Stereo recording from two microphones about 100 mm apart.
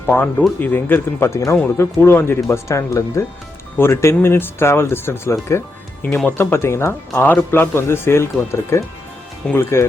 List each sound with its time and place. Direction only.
0.0 s speech: 20° left (ahead or behind)